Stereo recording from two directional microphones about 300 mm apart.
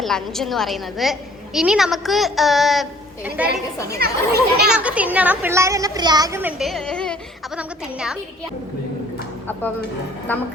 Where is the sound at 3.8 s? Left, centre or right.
Right.